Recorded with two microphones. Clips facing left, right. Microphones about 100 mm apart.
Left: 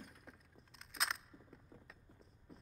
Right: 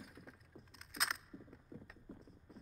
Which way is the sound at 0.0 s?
Centre (ahead or behind).